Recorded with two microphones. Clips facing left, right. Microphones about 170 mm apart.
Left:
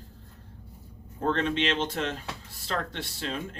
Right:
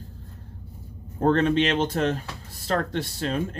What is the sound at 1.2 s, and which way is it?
Speech, 45° right (ahead or behind).